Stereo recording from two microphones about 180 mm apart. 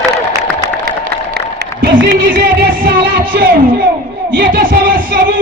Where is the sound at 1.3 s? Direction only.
65° right (ahead or behind).